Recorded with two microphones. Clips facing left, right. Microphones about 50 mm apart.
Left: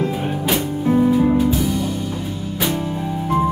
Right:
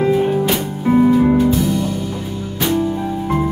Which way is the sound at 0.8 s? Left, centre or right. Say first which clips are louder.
Right 3 dB; right.